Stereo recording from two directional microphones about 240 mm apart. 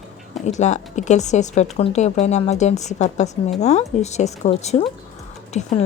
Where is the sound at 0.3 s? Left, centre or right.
Left.